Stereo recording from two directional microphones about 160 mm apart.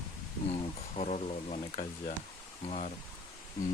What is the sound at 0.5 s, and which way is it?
Speech, 40° left (ahead or behind).